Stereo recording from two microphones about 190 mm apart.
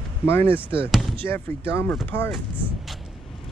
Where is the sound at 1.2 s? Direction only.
10° left (ahead or behind).